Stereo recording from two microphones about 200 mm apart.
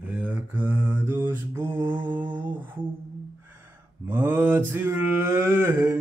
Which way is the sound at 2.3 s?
10° right (ahead or behind).